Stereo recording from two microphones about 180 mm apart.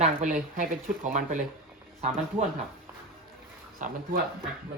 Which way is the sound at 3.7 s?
50° right (ahead or behind).